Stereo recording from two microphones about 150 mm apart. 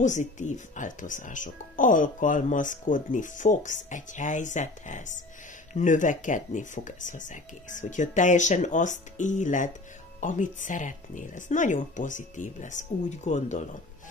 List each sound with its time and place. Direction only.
0.0 s speech: 55° left (ahead or behind)